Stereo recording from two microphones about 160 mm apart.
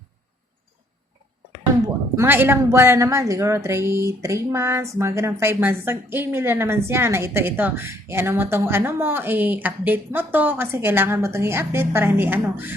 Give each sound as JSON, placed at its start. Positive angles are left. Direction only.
{"t": 2.1, "sound": "a woman's voice", "side_deg": -15}